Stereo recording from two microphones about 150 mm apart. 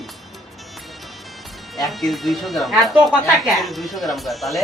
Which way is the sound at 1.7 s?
Centre (ahead or behind).